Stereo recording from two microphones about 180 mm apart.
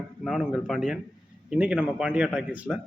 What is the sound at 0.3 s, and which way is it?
A man's voice, centre (ahead or behind).